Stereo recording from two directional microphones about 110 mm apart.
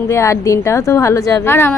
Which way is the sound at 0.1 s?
25° left (ahead or behind).